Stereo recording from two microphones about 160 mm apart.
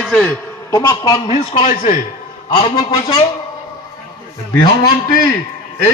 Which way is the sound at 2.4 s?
35° left (ahead or behind).